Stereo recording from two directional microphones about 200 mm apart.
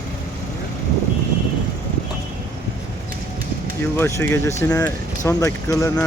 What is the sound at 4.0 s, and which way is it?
Speech, 10° left (ahead or behind).